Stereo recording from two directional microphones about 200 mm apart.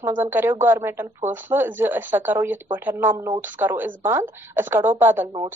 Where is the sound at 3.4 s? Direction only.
10° right (ahead or behind).